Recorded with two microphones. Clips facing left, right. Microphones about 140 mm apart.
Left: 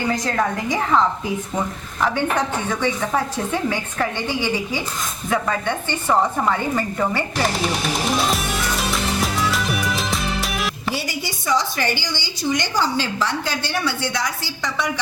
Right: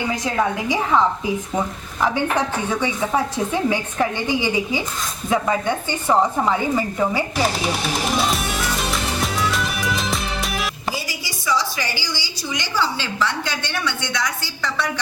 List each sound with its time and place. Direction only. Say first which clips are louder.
0.1 s a woman's voice: right 1 dB; 5° right (ahead or behind)
8.2 s music: even; centre (ahead or behind)
11.1 s a sound: left 2 dB; 55° left (ahead or behind)
12.8 s a woman's voice: left 1 dB; 40° left (ahead or behind)